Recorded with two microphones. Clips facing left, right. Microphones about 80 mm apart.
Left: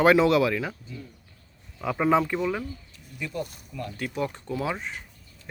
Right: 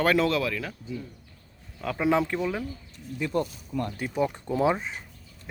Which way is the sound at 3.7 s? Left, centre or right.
Right.